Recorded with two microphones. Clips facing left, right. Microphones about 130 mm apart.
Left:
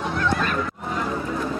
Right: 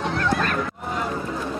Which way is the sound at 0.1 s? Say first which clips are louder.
Left 1 dB; 55° right (ahead or behind).